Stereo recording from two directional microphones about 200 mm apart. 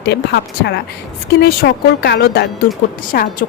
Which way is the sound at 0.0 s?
55° left (ahead or behind).